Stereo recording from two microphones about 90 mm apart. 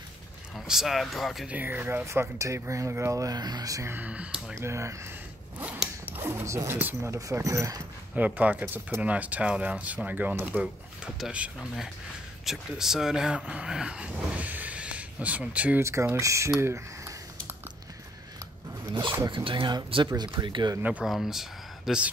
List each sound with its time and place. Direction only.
0.6 s speech: 5° right (ahead or behind)
1.5 s speech: 20° right (ahead or behind)
2.0 s speech: 35° right (ahead or behind)
3.9 s speech: 15° right (ahead or behind)
4.6 s speech: 35° right (ahead or behind)
6.0 s speech: 25° right (ahead or behind)
6.8 s speech: 20° right (ahead or behind)
7.2 s speech: 35° right (ahead or behind)
8.2 s speech: 15° right (ahead or behind)
15.8 s speech: 30° right (ahead or behind)
19.2 s speech: 65° right (ahead or behind)
20.1 s speech: 45° right (ahead or behind)
21.0 s speech: 5° right (ahead or behind)